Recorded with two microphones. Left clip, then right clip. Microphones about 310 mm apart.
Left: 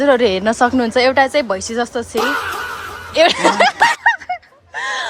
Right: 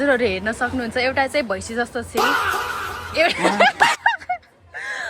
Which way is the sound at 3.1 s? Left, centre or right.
Centre.